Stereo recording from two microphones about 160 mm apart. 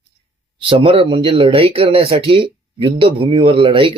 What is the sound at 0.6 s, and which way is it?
Speech, 35° right (ahead or behind).